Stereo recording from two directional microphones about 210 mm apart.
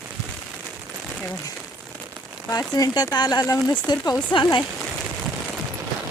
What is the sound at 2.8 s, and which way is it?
Speech, 15° left (ahead or behind).